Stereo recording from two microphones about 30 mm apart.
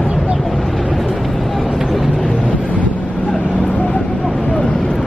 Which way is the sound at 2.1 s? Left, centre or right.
Left.